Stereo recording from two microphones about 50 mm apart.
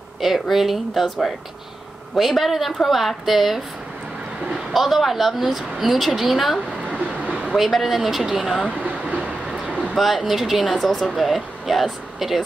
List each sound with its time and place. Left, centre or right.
0.2 s a woman's voice: centre
2.1 s a woman's voice: centre
6.9 s a sound: right
7.5 s a woman's voice: centre
8.6 s a sound: right
9.9 s a woman's voice: centre